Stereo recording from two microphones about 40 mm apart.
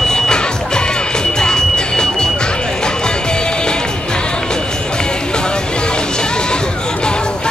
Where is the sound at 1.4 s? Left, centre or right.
Centre.